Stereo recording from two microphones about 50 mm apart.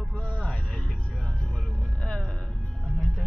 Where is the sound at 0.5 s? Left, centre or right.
Centre.